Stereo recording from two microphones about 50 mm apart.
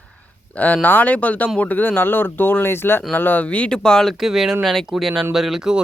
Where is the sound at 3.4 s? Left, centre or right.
Left.